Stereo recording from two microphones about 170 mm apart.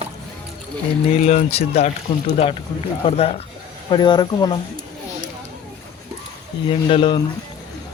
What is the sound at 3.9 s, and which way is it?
Speech, 25° left (ahead or behind).